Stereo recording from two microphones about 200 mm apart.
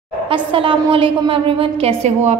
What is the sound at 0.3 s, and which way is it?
A woman's voice, 25° right (ahead or behind).